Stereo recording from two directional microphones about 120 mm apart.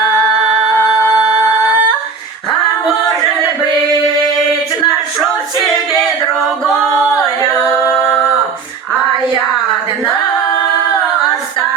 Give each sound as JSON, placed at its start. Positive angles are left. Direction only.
{"t": 1.1, "sound": "music", "side_deg": 35}
{"t": 7.9, "sound": "humming", "side_deg": 20}